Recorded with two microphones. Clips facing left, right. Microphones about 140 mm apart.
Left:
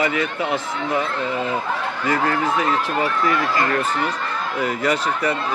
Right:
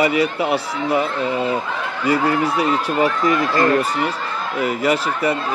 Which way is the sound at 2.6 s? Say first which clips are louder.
Right 3 dB; 15° right (ahead or behind).